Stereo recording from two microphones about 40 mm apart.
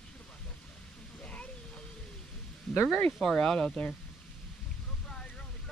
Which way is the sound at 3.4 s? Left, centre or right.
Centre.